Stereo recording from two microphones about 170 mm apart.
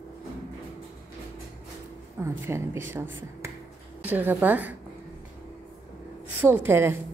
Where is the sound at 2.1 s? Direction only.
15° right (ahead or behind).